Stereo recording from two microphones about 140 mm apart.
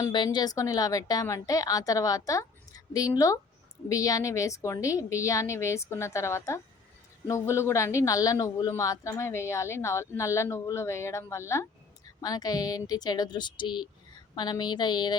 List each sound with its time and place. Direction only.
0.1 s speech: 30° left (ahead or behind)